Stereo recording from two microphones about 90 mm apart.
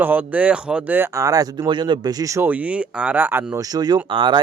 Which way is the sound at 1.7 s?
60° right (ahead or behind).